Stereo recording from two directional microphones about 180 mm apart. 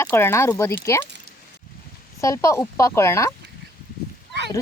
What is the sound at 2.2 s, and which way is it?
Speech, 15° left (ahead or behind).